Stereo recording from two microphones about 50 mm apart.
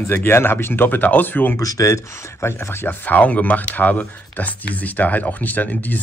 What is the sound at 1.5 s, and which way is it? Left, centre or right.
Speech, left.